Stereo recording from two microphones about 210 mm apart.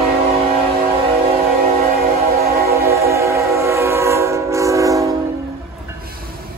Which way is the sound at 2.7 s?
15° right (ahead or behind).